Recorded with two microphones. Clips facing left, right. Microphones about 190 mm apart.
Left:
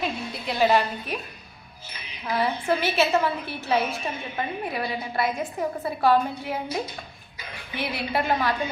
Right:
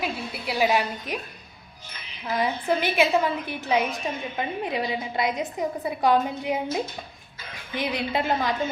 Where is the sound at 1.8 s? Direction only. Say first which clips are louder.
Left 1 dB; 10° left (ahead or behind).